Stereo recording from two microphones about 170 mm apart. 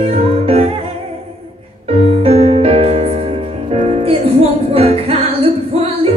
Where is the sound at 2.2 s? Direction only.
35° right (ahead or behind).